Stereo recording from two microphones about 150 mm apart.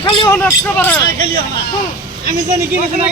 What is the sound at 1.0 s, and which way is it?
Speech, 70° right (ahead or behind).